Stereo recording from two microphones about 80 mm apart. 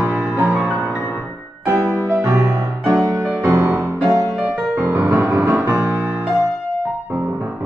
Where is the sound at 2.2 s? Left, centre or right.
Right.